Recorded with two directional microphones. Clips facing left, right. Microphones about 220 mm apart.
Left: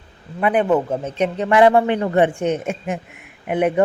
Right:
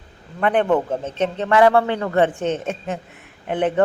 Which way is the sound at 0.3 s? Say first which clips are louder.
Left 1 dB; 10° left (ahead or behind).